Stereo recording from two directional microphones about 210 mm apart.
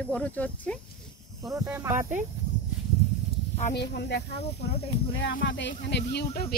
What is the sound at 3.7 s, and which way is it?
Speech, 50° left (ahead or behind).